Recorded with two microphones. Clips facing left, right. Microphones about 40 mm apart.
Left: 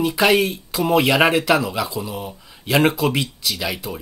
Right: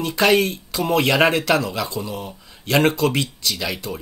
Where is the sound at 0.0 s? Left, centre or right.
Centre.